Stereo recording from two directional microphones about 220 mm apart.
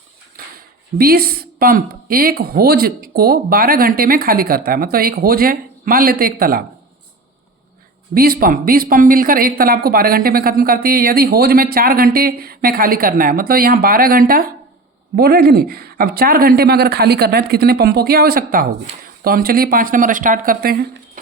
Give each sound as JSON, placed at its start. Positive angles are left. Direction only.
{"t": 0.4, "sound": "a sound", "side_deg": -40}
{"t": 0.9, "sound": "speech", "side_deg": -45}
{"t": 8.1, "sound": "speech", "side_deg": -40}